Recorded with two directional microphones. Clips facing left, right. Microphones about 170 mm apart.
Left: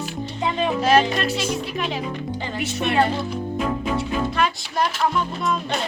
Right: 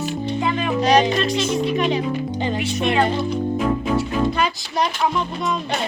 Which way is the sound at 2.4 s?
20° right (ahead or behind).